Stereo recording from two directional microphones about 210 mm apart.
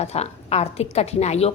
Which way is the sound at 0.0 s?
30° left (ahead or behind).